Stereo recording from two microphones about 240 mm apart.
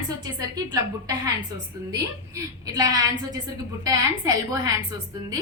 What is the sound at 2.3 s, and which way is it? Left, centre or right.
A woman's voice, centre.